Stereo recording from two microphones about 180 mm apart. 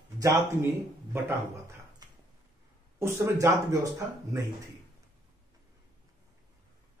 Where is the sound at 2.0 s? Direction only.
20° right (ahead or behind).